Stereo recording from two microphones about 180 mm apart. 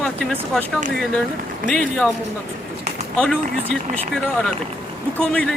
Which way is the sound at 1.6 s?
50° right (ahead or behind).